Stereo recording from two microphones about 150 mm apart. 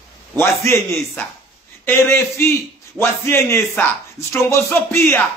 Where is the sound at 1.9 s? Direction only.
15° left (ahead or behind).